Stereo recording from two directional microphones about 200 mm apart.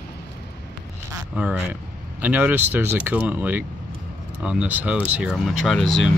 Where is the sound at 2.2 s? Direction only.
10° right (ahead or behind).